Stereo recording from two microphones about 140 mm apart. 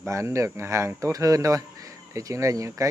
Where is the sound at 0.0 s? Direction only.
20° right (ahead or behind).